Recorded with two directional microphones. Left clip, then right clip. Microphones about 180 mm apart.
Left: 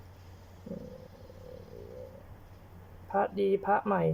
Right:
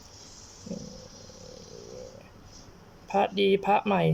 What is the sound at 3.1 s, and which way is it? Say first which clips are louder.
Speech: right 4 dB; 15° right (ahead or behind).